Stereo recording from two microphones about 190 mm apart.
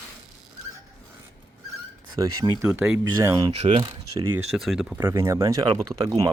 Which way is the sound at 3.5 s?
35° right (ahead or behind).